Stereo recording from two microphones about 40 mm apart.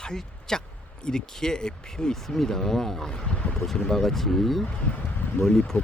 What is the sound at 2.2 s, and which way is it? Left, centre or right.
Speech, centre.